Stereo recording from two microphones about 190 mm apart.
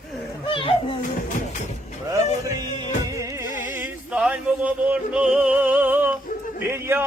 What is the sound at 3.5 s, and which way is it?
Music, 45° left (ahead or behind).